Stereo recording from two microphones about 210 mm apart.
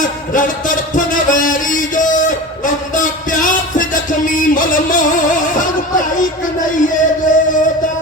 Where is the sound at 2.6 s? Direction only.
40° left (ahead or behind).